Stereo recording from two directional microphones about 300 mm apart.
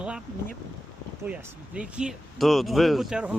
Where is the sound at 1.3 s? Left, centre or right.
Centre.